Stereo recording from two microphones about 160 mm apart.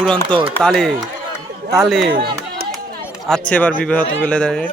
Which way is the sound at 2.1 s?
80° right.